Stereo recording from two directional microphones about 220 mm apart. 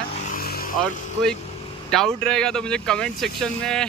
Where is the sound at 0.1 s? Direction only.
35° left (ahead or behind).